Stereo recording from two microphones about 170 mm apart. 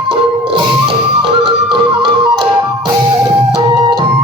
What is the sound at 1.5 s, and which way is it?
Music, 30° right (ahead or behind).